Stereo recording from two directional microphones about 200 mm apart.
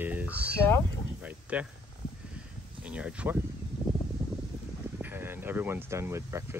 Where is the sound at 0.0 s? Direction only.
10° right (ahead or behind).